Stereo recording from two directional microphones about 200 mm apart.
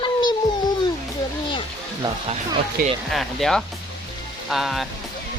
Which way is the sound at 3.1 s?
Centre (ahead or behind).